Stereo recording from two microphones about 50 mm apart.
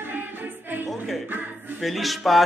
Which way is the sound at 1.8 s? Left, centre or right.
Centre.